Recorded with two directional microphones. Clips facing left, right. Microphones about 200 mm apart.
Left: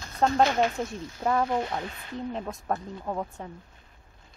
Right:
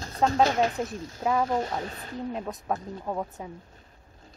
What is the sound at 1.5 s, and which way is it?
Speech, 40° right (ahead or behind).